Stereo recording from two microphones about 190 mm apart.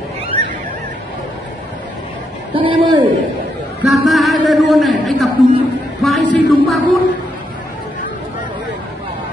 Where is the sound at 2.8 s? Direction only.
25° right (ahead or behind).